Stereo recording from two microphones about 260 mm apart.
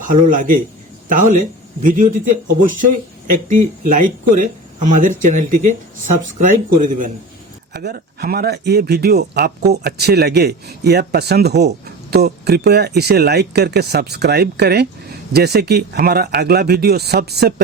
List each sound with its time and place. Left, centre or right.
0.0 s speech: right
1.8 s speech: right